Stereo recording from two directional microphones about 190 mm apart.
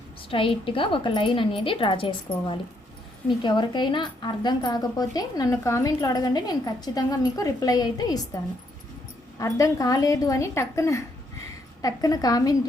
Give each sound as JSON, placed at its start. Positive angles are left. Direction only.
{"t": 0.3, "sound": "a woman's voice", "side_deg": 25}
{"t": 9.4, "sound": "a woman's voice", "side_deg": 15}